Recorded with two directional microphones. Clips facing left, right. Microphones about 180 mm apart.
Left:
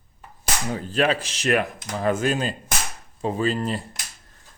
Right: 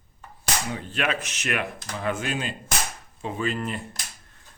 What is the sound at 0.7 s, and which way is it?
Speech, 35° left (ahead or behind).